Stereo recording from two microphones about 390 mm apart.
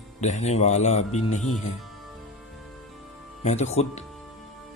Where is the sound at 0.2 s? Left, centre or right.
Centre.